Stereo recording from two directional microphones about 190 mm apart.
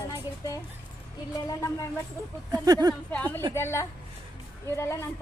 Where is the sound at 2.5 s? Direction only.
20° right (ahead or behind).